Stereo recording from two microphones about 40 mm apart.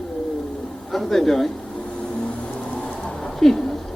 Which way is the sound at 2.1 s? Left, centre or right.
Left.